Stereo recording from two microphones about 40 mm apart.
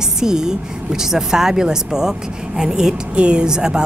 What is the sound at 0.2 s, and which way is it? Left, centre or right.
Speech, centre.